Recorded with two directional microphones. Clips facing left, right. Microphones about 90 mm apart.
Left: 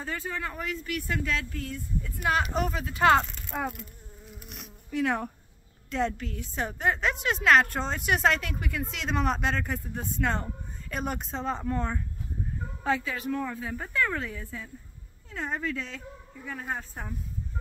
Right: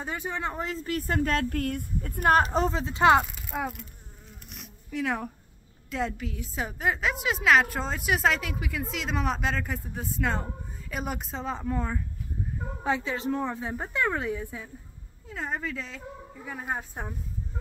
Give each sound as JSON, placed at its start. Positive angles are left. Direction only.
{"t": 0.0, "sound": "speech", "side_deg": -20}
{"t": 3.3, "sound": "a woman's voice", "side_deg": -5}
{"t": 12.8, "sound": "a woman's voice", "side_deg": -20}
{"t": 15.2, "sound": "a woman's voice", "side_deg": -5}
{"t": 16.4, "sound": "speech", "side_deg": -15}